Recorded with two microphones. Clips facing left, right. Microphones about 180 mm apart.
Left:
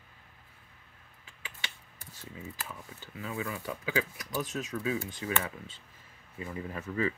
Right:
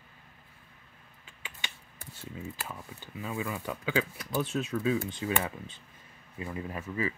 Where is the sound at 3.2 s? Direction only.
25° right (ahead or behind).